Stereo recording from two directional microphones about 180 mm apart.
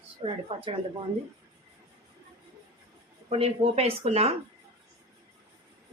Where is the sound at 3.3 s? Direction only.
35° right (ahead or behind).